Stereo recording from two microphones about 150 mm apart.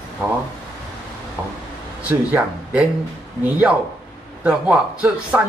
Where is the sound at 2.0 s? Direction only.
10° right (ahead or behind).